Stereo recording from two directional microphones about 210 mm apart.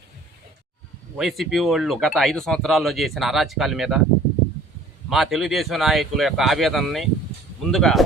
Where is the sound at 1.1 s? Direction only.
Centre (ahead or behind).